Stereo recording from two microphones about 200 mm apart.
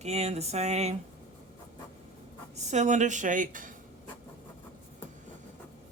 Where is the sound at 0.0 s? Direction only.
30° right (ahead or behind).